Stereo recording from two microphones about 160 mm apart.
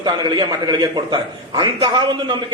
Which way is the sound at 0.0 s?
25° right (ahead or behind).